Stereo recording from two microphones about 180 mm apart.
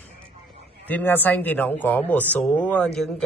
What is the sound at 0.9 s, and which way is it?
Speech, 10° left (ahead or behind).